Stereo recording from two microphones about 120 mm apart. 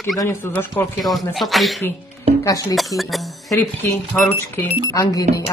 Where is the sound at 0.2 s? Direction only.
20° left (ahead or behind).